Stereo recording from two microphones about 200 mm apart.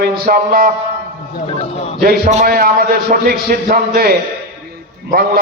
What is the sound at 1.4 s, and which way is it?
Speech, 30° left (ahead or behind).